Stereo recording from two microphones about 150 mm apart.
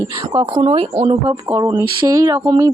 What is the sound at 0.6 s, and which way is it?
Speech, 40° right (ahead or behind).